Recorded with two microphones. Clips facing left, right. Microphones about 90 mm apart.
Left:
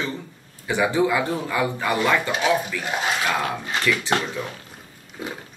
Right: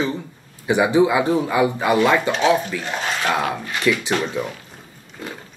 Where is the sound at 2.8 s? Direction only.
10° left (ahead or behind).